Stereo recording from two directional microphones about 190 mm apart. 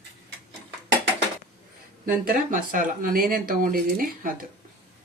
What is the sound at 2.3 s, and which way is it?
Speech, 45° right (ahead or behind).